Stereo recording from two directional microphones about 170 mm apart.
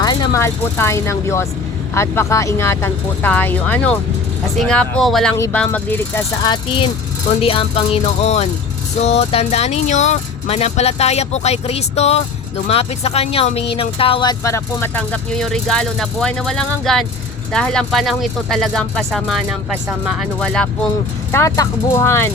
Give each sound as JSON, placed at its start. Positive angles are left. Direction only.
{"t": 0.0, "sound": "speech", "side_deg": 25}
{"t": 6.4, "sound": "speech", "side_deg": 25}
{"t": 21.3, "sound": "speech", "side_deg": 20}